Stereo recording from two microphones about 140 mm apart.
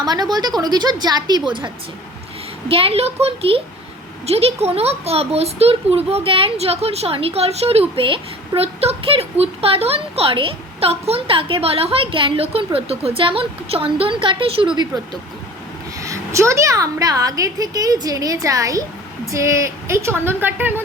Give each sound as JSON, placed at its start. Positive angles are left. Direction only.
{"t": 0.0, "sound": "a woman's voice", "side_deg": -30}
{"t": 14.9, "sound": "a woman's voice", "side_deg": -30}